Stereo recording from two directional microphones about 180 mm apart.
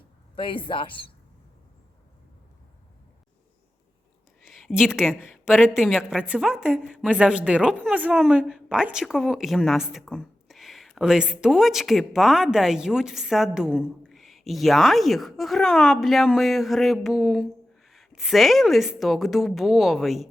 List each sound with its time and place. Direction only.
0.3 s speech: 30° left (ahead or behind)
4.4 s a woman's voice: centre (ahead or behind)